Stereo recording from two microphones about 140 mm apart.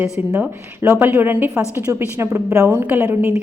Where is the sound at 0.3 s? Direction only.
20° right (ahead or behind).